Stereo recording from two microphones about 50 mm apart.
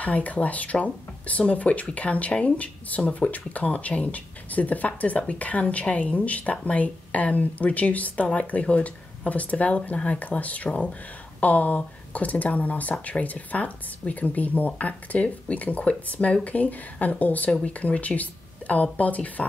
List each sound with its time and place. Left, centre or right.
0.0 s speech: left
17.5 s speech: left